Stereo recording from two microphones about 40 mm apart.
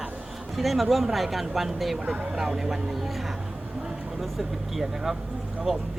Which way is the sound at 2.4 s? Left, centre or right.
Centre.